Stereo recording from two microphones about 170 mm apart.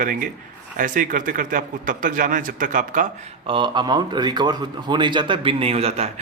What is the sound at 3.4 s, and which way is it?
Speech, 30° right (ahead or behind).